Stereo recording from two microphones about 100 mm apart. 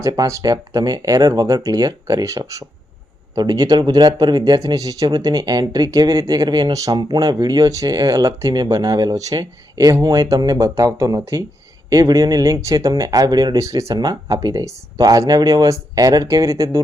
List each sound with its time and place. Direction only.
0.0 s speech: 30° right (ahead or behind)